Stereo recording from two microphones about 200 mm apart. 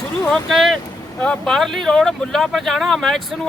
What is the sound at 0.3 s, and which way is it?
Speech, centre (ahead or behind).